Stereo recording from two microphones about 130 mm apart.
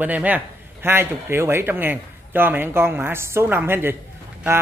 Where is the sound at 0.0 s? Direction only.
10° right (ahead or behind).